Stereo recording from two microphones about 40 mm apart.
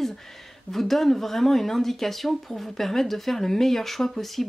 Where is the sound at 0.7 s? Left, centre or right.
Centre.